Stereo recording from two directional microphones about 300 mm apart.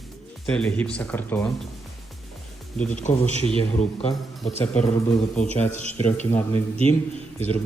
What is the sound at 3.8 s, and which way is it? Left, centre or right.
Speech, centre.